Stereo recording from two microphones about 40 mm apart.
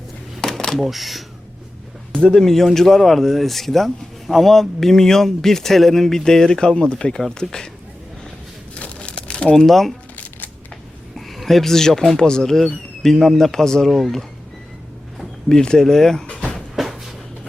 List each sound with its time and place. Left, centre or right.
0.4 s a sound: centre
0.8 s speech: centre
2.3 s speech: centre
8.7 s crumpling: left
9.6 s speech: centre
11.3 s speech: centre
15.4 s speech: centre
16.6 s a sound: centre